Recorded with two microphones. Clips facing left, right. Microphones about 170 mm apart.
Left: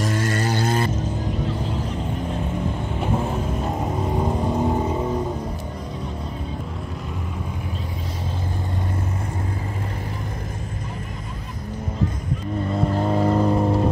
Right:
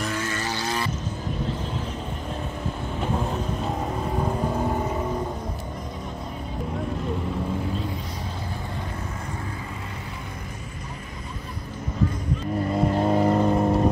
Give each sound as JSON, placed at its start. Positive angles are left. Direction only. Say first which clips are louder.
{"t": 0.0, "sound": "a sound", "louder": "left 5 dB", "side_deg": 50}
{"t": 3.0, "sound": "vehicle", "louder": "left 3 dB", "side_deg": 10}
{"t": 4.5, "sound": "vehicle", "louder": "left 4 dB", "side_deg": 15}
{"t": 12.7, "sound": "vehicle", "louder": "even", "side_deg": 0}